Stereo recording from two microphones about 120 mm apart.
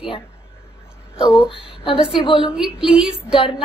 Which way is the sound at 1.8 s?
45° left (ahead or behind).